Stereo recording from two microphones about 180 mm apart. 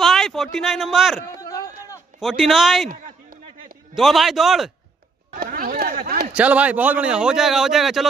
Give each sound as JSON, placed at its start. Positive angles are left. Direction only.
{"t": 0.0, "sound": "speech", "side_deg": 0}
{"t": 1.4, "sound": "a sound", "side_deg": 15}
{"t": 2.1, "sound": "speech", "side_deg": 0}
{"t": 3.9, "sound": "speech", "side_deg": 0}
{"t": 5.3, "sound": "a sound", "side_deg": -50}
{"t": 6.3, "sound": "speech", "side_deg": -5}